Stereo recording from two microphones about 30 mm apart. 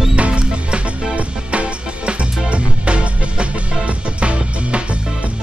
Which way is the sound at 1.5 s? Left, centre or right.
Right.